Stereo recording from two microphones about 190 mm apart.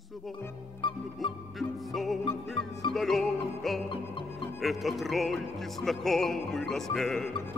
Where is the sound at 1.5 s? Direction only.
Centre (ahead or behind).